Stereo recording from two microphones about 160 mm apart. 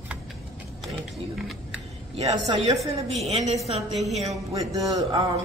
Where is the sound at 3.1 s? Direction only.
40° right (ahead or behind).